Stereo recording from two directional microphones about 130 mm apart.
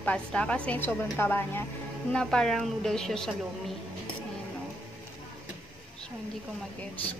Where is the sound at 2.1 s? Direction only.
5° left (ahead or behind).